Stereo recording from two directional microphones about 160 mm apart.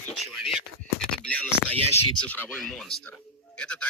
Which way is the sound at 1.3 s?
10° left (ahead or behind).